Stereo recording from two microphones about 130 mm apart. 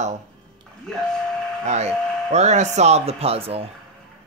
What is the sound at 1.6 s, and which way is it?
Speech, 60° right (ahead or behind).